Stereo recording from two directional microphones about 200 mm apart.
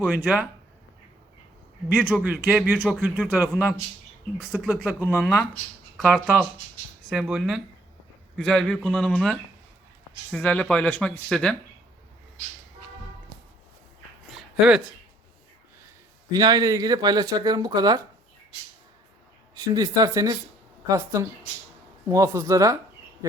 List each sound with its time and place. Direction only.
0.0 s speech: 5° right (ahead or behind)
1.9 s speech: 5° right (ahead or behind)
16.3 s speech: 20° right (ahead or behind)
19.5 s speech: 20° right (ahead or behind)